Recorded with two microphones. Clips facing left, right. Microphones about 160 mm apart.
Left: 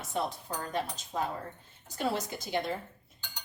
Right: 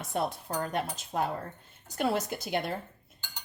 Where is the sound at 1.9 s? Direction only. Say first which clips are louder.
Right 3 dB; 60° right (ahead or behind).